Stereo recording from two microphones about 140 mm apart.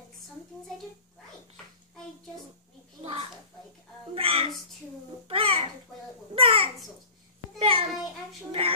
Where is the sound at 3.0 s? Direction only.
45° right (ahead or behind).